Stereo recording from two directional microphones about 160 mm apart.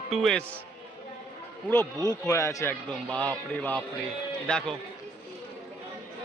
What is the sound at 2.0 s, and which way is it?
Speech, 20° left (ahead or behind).